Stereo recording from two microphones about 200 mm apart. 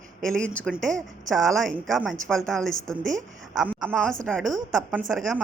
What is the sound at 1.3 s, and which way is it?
A woman's voice, centre (ahead or behind).